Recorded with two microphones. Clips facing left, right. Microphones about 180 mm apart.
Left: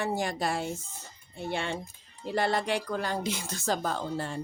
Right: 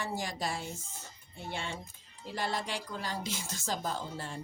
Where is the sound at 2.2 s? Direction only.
60° left (ahead or behind).